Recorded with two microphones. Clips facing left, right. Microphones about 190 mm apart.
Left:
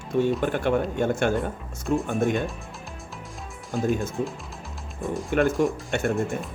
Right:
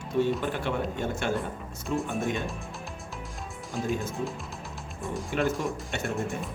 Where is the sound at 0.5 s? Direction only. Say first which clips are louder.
Left 6 dB; 55° left (ahead or behind).